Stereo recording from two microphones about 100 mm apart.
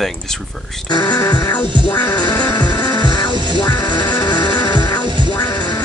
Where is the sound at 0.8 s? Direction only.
45° left (ahead or behind).